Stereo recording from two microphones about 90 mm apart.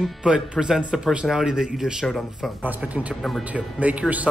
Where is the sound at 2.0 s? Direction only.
5° left (ahead or behind).